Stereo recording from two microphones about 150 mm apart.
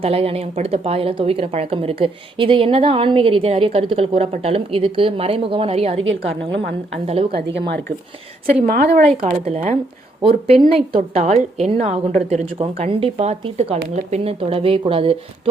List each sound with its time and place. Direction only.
0.0 s a woman's voice: 40° right (ahead or behind)
8.6 s speech: 90° right
9.2 s a woman's voice: 50° right (ahead or behind)
10.2 s a woman's voice: 40° right (ahead or behind)